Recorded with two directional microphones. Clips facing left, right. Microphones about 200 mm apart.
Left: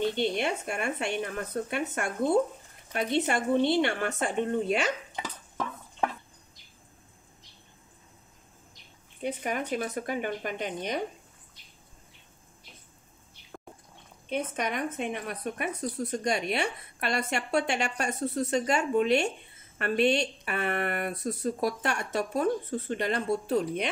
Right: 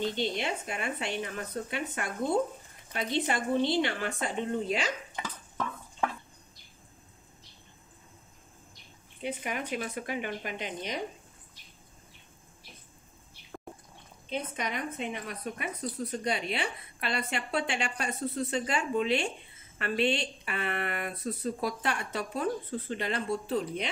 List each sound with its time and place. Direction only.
0.0 s a woman's voice: 55° left (ahead or behind)
5.2 s a sound: 15° left (ahead or behind)
9.2 s a woman's voice: 45° left (ahead or behind)
14.3 s a woman's voice: 50° left (ahead or behind)